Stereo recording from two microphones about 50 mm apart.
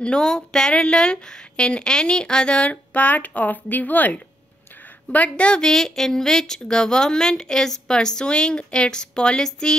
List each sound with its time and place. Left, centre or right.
0.2 s a woman's voice: centre; by 4.2 s left
5.3 s a woman's voice: centre
5.7 s a woman's voice: centre